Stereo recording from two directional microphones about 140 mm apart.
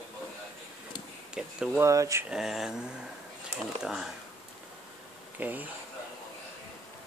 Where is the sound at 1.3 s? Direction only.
5° right (ahead or behind).